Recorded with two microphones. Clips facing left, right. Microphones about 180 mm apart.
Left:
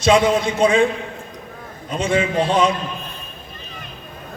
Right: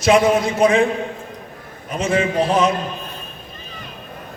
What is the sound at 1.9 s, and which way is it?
Speech, 30° left (ahead or behind).